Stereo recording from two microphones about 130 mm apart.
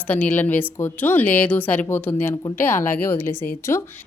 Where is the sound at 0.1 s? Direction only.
10° left (ahead or behind).